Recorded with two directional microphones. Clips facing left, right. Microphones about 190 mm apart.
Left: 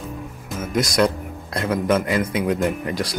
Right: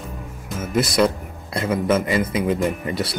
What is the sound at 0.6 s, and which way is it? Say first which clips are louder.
Speech: right 1 dB; 5° right (ahead or behind).